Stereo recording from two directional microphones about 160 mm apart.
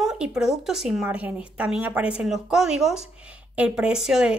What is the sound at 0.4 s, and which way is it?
Speech, 5° right (ahead or behind).